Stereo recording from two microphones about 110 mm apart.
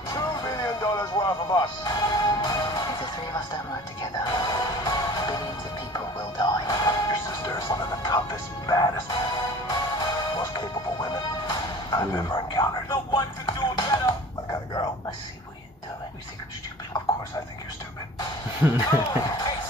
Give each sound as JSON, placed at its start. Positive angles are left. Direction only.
{"t": 0.1, "sound": "music", "side_deg": 35}
{"t": 12.2, "sound": "a sound", "side_deg": 40}
{"t": 13.5, "sound": "music", "side_deg": 45}
{"t": 18.9, "sound": "speech", "side_deg": 35}